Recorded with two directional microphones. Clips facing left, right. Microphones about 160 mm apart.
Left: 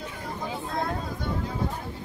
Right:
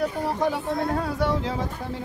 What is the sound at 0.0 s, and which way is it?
Speech, 80° right.